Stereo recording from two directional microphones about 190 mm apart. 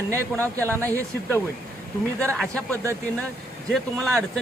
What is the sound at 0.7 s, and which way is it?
Speech, 15° right (ahead or behind).